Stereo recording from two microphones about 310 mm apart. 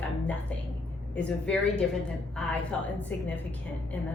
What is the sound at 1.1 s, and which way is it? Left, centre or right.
A woman's voice, centre.